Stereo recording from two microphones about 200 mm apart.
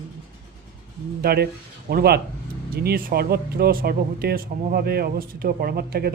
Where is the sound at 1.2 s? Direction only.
50° right (ahead or behind).